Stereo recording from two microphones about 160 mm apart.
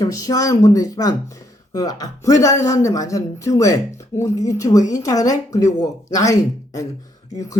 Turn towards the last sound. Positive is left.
turn(degrees=20)  # may be behind; listen again after turning